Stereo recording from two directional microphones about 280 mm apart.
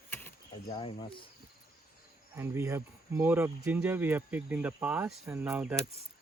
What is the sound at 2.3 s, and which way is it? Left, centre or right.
Speech, centre.